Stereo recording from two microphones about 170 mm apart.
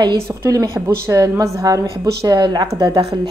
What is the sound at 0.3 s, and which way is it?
A woman's voice, 20° right (ahead or behind).